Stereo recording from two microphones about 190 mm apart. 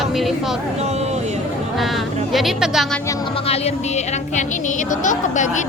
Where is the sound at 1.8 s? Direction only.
Centre (ahead or behind).